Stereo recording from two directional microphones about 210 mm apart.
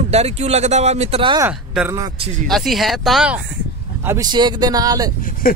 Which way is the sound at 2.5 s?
Centre (ahead or behind).